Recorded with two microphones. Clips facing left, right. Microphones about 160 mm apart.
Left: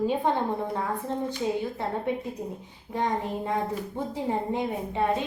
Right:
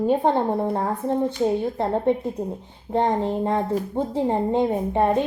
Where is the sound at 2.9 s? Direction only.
55° right (ahead or behind).